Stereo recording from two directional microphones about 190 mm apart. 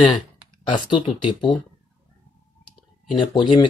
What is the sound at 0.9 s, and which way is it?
Speech, 25° left (ahead or behind).